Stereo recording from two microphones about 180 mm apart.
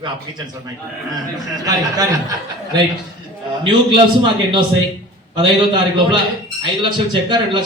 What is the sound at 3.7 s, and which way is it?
A man's voice, 25° right (ahead or behind).